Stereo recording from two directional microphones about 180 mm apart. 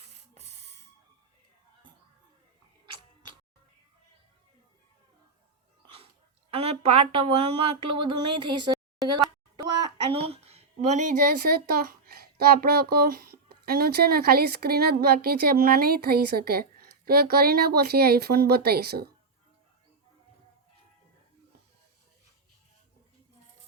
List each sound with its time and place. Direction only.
0.3 s music: 35° right (ahead or behind)
6.5 s speech: 35° right (ahead or behind)
9.6 s a sound: 20° right (ahead or behind); by 11.3 s 45° right (ahead or behind)
11.4 s speech: 55° right (ahead or behind)